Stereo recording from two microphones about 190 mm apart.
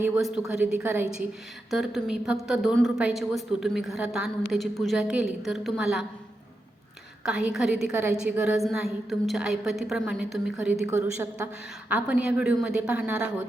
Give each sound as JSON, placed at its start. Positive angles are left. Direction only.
{"t": 0.2, "sound": "a woman's voice", "side_deg": 0}
{"t": 7.3, "sound": "a woman's voice", "side_deg": -5}
{"t": 10.8, "sound": "a woman's voice", "side_deg": -15}